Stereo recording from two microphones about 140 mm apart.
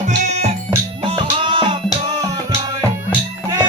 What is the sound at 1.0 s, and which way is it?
Music, 40° right (ahead or behind).